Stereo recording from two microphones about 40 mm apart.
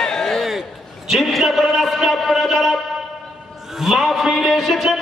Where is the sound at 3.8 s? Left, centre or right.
Centre.